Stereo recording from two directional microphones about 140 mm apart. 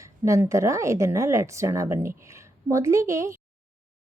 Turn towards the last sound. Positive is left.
turn(degrees=-20)  # may be behind; listen again after turning